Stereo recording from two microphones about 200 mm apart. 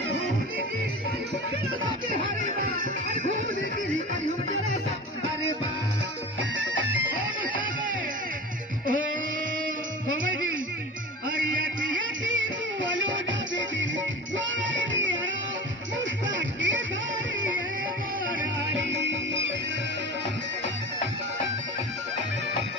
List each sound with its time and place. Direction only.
12.0 s music: 70° right (ahead or behind)
16.3 s music: 65° right (ahead or behind)
19.0 s music: 65° right (ahead or behind)